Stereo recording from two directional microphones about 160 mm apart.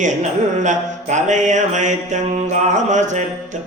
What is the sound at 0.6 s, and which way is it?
A man's voice, 50° right (ahead or behind).